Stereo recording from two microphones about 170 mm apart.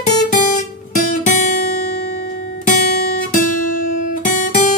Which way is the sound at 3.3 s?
50° left (ahead or behind).